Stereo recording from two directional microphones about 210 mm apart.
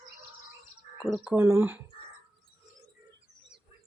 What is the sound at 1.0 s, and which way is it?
Speech, centre (ahead or behind).